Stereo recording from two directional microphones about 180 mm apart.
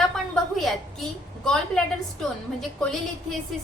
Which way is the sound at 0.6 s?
Centre (ahead or behind).